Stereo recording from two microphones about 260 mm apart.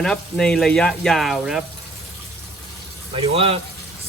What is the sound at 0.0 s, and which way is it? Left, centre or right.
Speech, centre.